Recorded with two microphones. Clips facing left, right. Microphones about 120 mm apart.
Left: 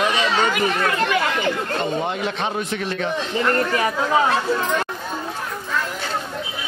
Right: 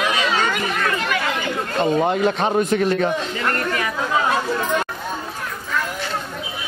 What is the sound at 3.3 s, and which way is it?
Speech, 25° left (ahead or behind).